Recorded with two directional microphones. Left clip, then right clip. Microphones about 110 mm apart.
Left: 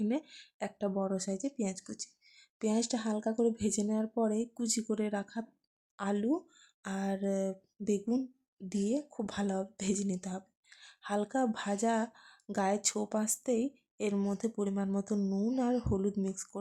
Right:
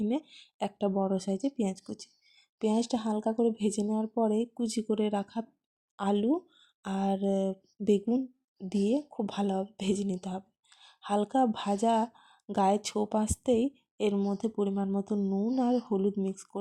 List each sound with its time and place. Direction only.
0.0 s speech: 20° right (ahead or behind)
8.0 s speech: 10° right (ahead or behind)
8.7 s speech: 25° right (ahead or behind)